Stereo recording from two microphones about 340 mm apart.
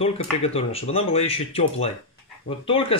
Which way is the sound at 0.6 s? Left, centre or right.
Centre.